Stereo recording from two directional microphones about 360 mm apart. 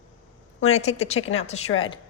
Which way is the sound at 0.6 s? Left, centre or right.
Centre.